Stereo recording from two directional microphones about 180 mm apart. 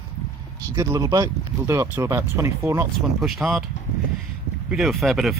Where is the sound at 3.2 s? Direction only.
Centre (ahead or behind).